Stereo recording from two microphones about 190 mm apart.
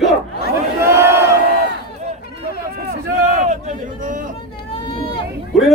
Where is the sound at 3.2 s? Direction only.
40° right (ahead or behind).